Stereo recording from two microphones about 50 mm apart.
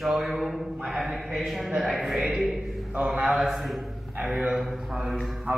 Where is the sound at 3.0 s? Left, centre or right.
Centre.